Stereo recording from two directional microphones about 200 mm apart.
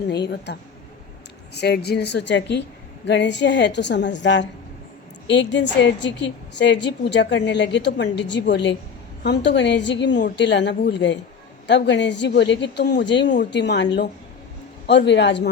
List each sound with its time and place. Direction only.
0.1 s a woman's voice: 55° left (ahead or behind)
1.5 s a woman's voice: 55° left (ahead or behind)